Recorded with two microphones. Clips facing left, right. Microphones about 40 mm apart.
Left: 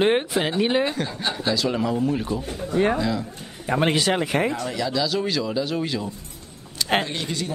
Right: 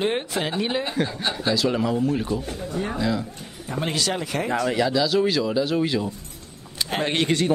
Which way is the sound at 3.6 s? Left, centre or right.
Left.